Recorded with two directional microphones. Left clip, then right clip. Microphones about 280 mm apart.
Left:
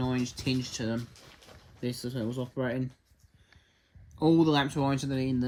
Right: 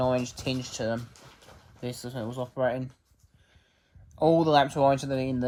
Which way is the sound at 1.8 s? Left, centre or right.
Right.